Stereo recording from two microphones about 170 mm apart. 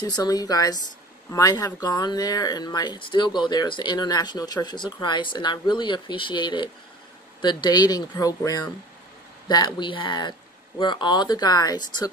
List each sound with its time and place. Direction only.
0.0 s speech: 20° left (ahead or behind)